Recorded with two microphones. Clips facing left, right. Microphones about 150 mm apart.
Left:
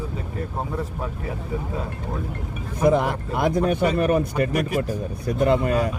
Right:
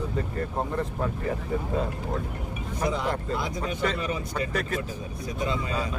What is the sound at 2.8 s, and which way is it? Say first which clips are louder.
Speech: left 8 dB; 55° left (ahead or behind).